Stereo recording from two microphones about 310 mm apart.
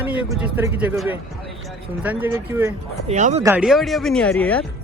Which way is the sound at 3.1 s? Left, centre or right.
Right.